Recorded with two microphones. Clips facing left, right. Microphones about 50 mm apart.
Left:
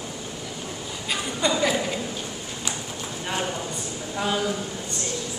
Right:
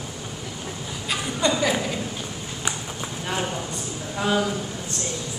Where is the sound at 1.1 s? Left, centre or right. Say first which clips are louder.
Right 1 dB; centre.